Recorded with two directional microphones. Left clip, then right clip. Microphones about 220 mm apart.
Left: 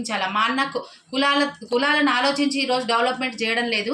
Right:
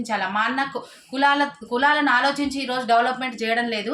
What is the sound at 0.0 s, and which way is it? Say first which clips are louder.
A woman's voice: left 1 dB; 20° right (ahead or behind).